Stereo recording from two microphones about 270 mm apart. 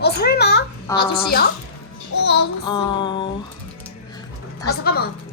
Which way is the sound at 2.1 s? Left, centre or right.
Left.